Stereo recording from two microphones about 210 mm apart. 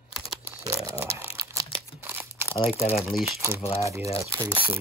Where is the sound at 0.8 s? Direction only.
10° right (ahead or behind).